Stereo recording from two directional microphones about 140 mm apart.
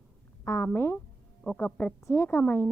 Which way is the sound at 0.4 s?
20° left (ahead or behind).